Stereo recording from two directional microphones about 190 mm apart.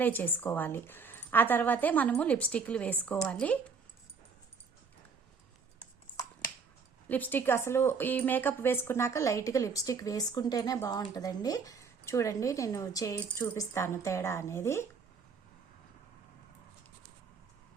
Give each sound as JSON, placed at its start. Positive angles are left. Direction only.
{"t": 0.0, "sound": "a woman's voice", "side_deg": 10}
{"t": 7.1, "sound": "a woman's voice", "side_deg": 10}